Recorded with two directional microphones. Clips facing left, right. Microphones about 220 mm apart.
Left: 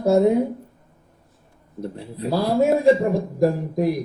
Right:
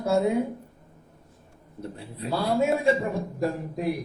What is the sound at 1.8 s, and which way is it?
Speech, 35° left (ahead or behind).